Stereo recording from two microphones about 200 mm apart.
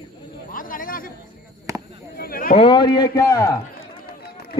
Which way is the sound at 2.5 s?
25° left (ahead or behind).